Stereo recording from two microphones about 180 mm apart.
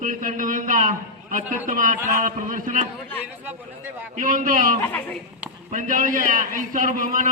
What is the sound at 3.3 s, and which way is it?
Speech, 10° right (ahead or behind).